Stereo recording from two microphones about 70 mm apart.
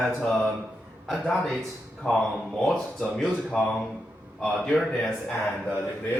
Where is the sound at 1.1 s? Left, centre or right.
Centre.